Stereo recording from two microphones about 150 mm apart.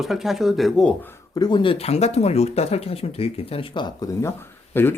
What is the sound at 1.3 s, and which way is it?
Speech, 30° left (ahead or behind).